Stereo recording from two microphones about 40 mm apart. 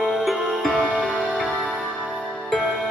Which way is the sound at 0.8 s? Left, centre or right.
Centre.